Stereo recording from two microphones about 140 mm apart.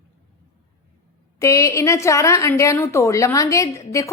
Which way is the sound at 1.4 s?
20° left (ahead or behind).